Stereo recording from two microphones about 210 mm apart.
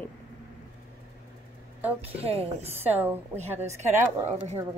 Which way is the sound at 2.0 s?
30° right (ahead or behind).